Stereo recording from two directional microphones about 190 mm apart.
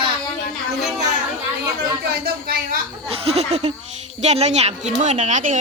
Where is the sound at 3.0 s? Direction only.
30° right (ahead or behind).